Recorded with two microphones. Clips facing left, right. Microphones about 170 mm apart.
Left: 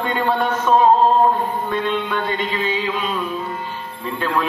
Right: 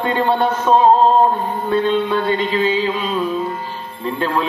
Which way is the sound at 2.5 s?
30° right (ahead or behind).